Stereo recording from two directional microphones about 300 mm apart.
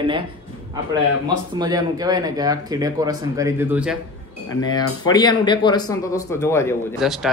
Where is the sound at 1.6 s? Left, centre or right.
Centre.